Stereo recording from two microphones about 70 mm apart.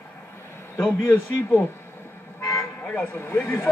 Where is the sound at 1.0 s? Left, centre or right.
Left.